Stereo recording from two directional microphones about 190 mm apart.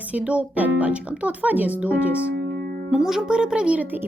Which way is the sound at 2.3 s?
55° right (ahead or behind).